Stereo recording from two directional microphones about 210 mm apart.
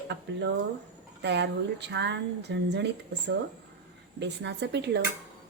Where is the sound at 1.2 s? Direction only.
55° right (ahead or behind).